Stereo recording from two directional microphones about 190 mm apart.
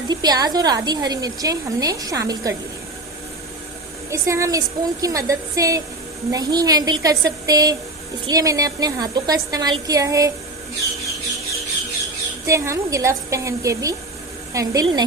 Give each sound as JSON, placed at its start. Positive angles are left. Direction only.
{"t": 0.1, "sound": "a woman's voice", "side_deg": -20}
{"t": 4.1, "sound": "a woman's voice", "side_deg": -15}
{"t": 12.5, "sound": "a woman's voice", "side_deg": -15}